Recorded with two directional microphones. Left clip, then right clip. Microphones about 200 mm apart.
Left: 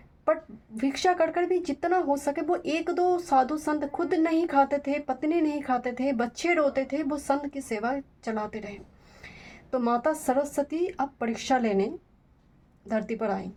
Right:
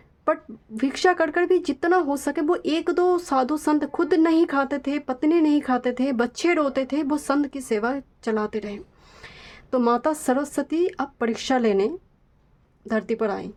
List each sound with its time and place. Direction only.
0.3 s speech: 35° right (ahead or behind)
12.9 s speech: 35° right (ahead or behind)